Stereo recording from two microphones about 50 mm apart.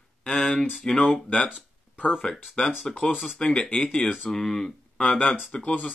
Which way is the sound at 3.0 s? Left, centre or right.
Left.